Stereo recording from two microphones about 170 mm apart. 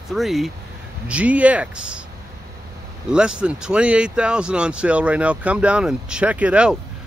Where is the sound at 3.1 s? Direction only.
5° right (ahead or behind).